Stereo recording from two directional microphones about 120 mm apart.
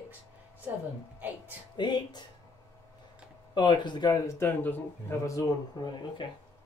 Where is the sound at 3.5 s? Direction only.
40° left (ahead or behind).